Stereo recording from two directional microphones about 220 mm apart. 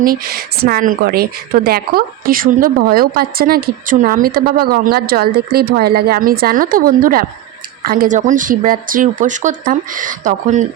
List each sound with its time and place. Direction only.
0.0 s speech: 40° right (ahead or behind)